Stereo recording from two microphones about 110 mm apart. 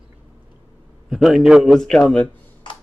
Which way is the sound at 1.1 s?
5° right (ahead or behind).